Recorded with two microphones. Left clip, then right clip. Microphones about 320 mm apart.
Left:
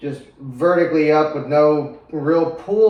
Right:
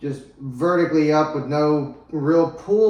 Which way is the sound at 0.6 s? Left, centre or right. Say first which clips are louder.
Left 3 dB; centre.